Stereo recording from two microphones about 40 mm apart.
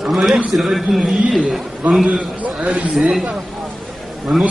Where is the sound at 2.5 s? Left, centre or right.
Right.